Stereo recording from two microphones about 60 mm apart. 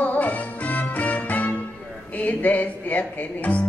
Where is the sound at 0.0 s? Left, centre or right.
Left.